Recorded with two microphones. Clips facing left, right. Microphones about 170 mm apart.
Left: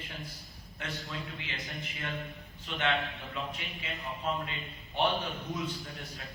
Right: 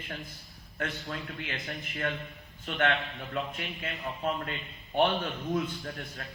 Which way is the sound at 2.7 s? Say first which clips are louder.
Right 3 dB; 50° right (ahead or behind).